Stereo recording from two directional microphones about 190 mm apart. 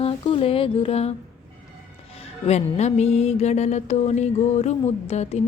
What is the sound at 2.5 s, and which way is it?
Music, 35° left (ahead or behind).